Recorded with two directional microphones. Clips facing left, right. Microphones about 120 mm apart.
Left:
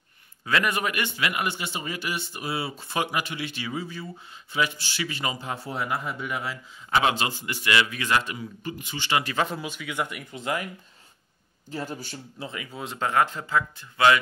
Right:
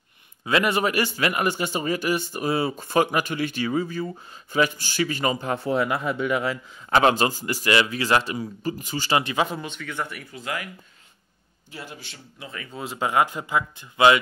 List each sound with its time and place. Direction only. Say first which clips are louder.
0.5 s a man's voice: right 4 dB; 25° right (ahead or behind); by 6.6 s 70° right (ahead or behind)
6.9 s a man's voice: right 5 dB; 45° right (ahead or behind)
9.2 s speech: right 2 dB; 15° right (ahead or behind)
9.5 s speech: right 1 dB; 5° left (ahead or behind); by 10.7 s 25° left (ahead or behind)
11.7 s speech: left 6 dB; 40° left (ahead or behind)
12.7 s speech: right 2 dB; 5° right (ahead or behind); by 14.2 s 20° right (ahead or behind)